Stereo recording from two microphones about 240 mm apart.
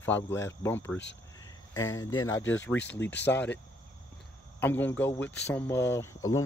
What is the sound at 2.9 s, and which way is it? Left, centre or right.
Speech, centre.